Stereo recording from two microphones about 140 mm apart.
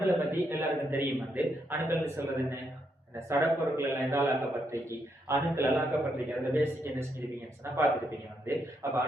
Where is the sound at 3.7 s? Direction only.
20° right (ahead or behind).